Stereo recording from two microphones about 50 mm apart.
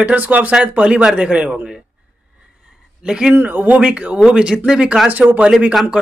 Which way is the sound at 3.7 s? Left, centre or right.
Right.